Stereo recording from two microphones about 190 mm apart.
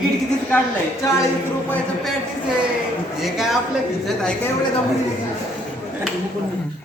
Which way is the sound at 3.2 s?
Centre (ahead or behind).